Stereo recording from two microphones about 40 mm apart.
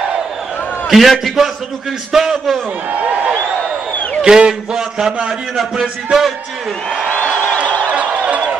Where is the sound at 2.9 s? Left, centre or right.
Right.